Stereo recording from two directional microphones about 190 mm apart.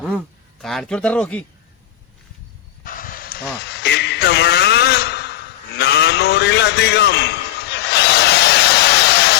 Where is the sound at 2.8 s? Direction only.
45° left (ahead or behind).